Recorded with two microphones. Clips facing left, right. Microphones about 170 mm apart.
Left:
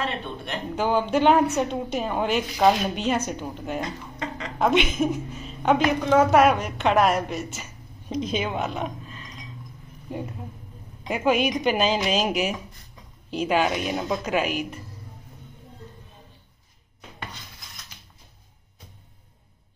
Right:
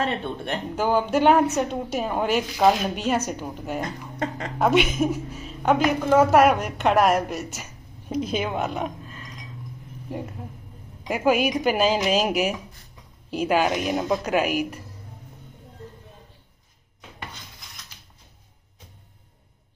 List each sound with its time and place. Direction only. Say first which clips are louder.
0.0 s speech: right 4 dB; 50° right (ahead or behind)
0.7 s a woman's voice: right 1 dB; 5° right (ahead or behind)
11.1 s a woman's voice: right 1 dB; 10° right (ahead or behind)